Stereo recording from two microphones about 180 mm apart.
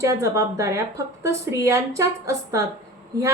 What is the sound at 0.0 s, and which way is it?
A woman's voice, 15° right (ahead or behind).